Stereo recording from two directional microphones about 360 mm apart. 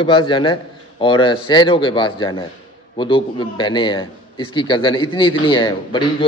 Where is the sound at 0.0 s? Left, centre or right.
Centre.